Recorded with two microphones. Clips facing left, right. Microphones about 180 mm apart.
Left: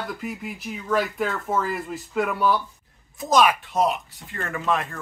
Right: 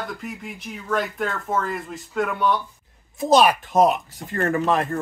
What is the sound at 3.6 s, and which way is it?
Speech, 50° right (ahead or behind).